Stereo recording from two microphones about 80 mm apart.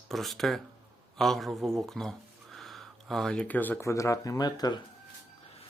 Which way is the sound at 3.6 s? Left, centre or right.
Left.